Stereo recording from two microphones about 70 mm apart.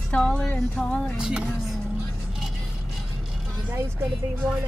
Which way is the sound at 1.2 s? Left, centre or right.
Centre.